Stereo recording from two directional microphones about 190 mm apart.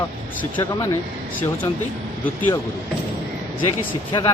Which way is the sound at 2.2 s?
10° left (ahead or behind).